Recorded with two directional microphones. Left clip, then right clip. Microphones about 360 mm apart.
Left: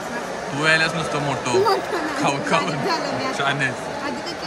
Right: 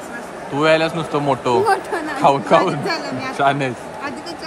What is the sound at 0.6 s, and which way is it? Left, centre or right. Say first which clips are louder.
Speech: right 3 dB; centre.